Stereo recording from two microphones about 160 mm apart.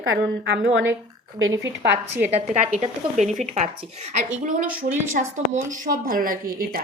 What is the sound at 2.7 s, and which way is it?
A woman's voice, 50° right (ahead or behind).